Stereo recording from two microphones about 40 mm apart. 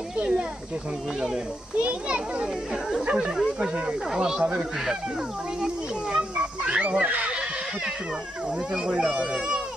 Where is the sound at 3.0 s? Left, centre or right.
Right.